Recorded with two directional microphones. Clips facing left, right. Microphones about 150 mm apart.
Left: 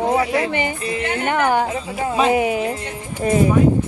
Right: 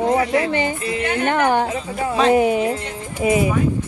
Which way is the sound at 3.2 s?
10° right (ahead or behind).